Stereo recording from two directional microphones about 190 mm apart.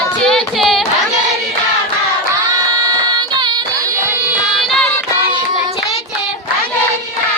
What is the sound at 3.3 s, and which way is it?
Music, 20° right (ahead or behind).